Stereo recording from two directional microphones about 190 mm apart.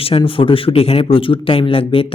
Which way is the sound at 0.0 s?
30° left (ahead or behind).